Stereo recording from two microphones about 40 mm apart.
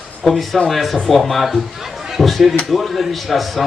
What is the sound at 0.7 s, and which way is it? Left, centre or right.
A man's voice, centre.